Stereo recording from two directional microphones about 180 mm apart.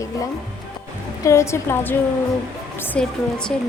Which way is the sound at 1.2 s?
15° left (ahead or behind).